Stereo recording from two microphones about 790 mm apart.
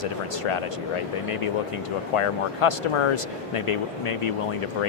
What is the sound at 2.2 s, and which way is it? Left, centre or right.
Speech, left.